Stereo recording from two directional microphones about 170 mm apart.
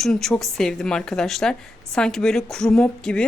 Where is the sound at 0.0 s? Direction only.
Centre (ahead or behind).